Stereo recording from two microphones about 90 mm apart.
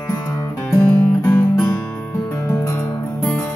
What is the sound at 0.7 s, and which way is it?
Music, 15° left (ahead or behind).